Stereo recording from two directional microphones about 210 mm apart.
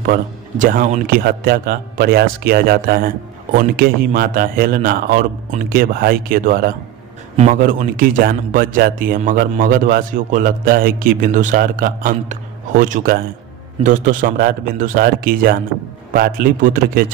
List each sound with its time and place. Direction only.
0.0 s a man's voice: 40° right (ahead or behind)